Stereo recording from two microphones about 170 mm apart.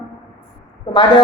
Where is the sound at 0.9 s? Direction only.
30° left (ahead or behind).